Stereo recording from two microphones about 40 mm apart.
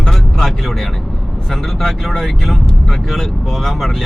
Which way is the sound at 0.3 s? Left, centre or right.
Centre.